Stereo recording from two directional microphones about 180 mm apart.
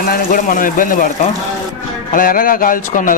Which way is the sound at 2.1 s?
50° left (ahead or behind).